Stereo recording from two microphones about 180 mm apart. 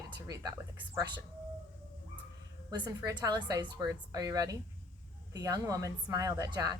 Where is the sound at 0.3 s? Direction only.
15° right (ahead or behind).